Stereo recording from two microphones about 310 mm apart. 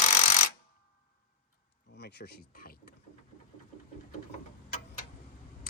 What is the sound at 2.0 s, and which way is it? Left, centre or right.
Speech, left.